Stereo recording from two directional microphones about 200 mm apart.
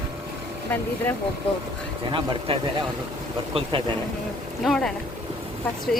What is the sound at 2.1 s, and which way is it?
Speech, 25° right (ahead or behind).